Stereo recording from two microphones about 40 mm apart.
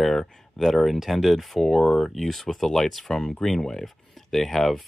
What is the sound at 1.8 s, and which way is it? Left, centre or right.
Speech, centre.